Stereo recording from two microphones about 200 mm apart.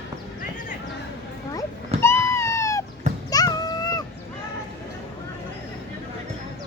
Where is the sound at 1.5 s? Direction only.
15° left (ahead or behind).